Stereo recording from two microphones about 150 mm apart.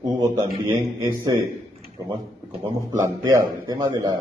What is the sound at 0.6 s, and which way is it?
Speech, 30° right (ahead or behind).